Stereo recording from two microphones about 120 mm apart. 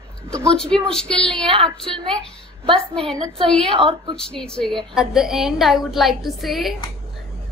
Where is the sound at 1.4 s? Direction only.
45° right (ahead or behind).